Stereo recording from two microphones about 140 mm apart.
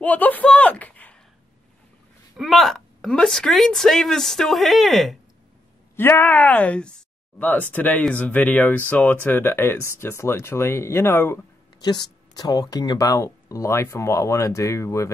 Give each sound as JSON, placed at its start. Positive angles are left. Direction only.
{"t": 0.0, "sound": "speech", "side_deg": 10}
{"t": 2.3, "sound": "a woman's voice", "side_deg": 0}
{"t": 5.9, "sound": "speech", "side_deg": 15}
{"t": 11.8, "sound": "speech", "side_deg": 30}